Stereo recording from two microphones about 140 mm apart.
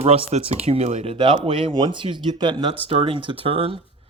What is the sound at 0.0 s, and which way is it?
Speech, 45° right (ahead or behind).